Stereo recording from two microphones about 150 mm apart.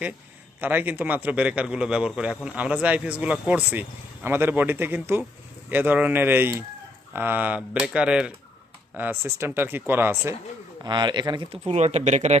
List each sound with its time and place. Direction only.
0.6 s a man's voice: 10° right (ahead or behind)
10.8 s speech: 30° right (ahead or behind)
11.5 s speech: 45° right (ahead or behind)